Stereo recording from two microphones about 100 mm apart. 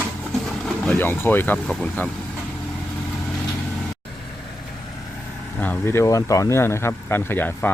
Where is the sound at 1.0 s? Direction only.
20° left (ahead or behind).